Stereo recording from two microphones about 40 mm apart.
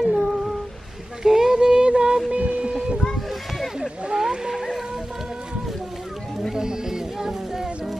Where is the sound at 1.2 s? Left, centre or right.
Centre.